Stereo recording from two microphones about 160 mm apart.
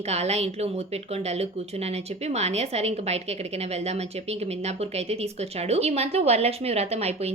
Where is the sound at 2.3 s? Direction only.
45° right (ahead or behind).